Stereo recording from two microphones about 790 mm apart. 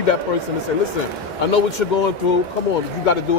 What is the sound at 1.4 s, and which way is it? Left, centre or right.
Speech, left.